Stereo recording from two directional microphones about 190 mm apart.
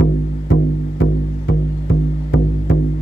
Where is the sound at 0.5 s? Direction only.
65° left (ahead or behind).